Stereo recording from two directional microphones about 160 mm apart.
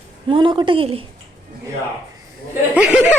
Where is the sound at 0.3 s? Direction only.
30° right (ahead or behind).